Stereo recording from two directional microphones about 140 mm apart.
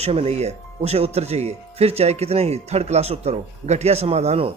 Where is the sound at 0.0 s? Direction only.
45° right (ahead or behind).